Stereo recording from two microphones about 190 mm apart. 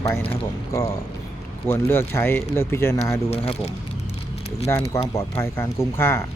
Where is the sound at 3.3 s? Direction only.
30° left (ahead or behind).